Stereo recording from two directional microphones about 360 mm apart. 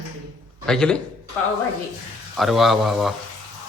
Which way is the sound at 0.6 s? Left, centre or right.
Centre.